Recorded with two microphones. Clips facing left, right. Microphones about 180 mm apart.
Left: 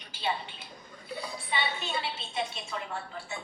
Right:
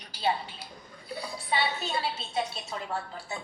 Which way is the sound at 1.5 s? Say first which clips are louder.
Right 4 dB; 40° right (ahead or behind).